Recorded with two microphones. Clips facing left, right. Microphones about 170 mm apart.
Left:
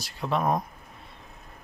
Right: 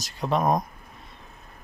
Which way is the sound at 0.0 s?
40° right (ahead or behind).